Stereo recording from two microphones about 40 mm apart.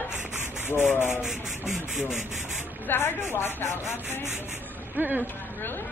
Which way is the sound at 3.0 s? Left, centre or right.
Left.